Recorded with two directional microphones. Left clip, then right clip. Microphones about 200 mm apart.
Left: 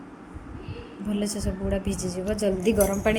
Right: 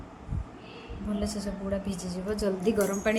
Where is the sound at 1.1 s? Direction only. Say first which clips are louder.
Left 4 dB; 10° left (ahead or behind).